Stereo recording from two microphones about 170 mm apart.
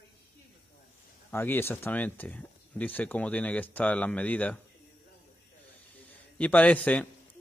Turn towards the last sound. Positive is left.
turn(degrees=10)  # may be behind; listen again after turning